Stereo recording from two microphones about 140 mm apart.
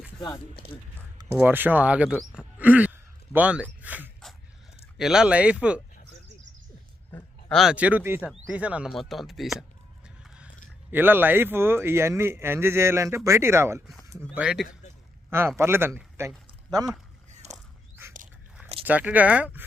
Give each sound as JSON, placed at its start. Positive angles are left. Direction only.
{"t": 1.4, "sound": "speech", "side_deg": -15}
{"t": 2.3, "sound": "a sound", "side_deg": -10}
{"t": 4.9, "sound": "speech", "side_deg": -5}
{"t": 7.5, "sound": "speech", "side_deg": -5}
{"t": 8.2, "sound": "speech", "side_deg": -5}
{"t": 10.2, "sound": "biting", "side_deg": -10}
{"t": 10.9, "sound": "speech", "side_deg": -15}
{"t": 14.3, "sound": "speech", "side_deg": -5}
{"t": 15.3, "sound": "speech", "side_deg": -15}
{"t": 17.4, "sound": "a sound", "side_deg": -55}
{"t": 18.9, "sound": "speech", "side_deg": -10}